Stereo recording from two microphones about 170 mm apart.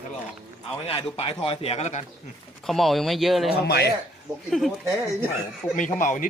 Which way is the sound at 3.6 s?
70° left (ahead or behind).